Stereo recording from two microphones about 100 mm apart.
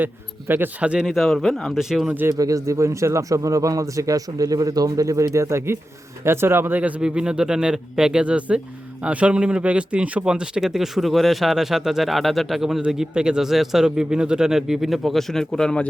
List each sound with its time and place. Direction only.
0.0 s a man's voice: 20° right (ahead or behind)
1.0 s speech: centre (ahead or behind)
2.3 s a man's voice: 35° right (ahead or behind); by 15.9 s 5° left (ahead or behind)